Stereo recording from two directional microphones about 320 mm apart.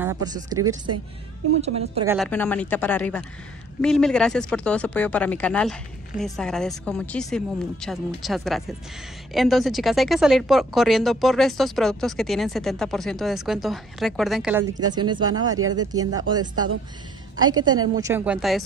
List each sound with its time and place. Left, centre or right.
0.0 s a woman's voice: centre
2.0 s a woman's voice: centre